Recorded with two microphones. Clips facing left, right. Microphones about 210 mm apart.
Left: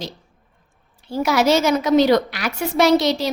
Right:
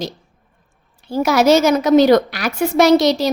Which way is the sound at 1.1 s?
40° right (ahead or behind).